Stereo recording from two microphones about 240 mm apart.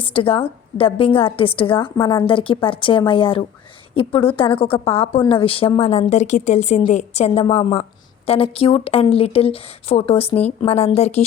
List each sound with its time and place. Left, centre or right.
0.0 s a woman's voice: left